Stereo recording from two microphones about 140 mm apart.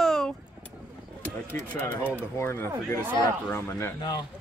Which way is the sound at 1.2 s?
15° left (ahead or behind).